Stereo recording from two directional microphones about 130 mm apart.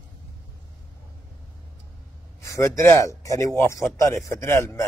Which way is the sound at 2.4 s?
25° left (ahead or behind).